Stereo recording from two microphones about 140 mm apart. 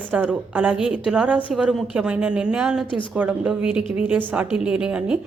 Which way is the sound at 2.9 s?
35° left (ahead or behind).